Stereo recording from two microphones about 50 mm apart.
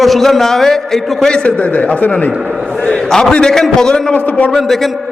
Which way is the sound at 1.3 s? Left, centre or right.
Left.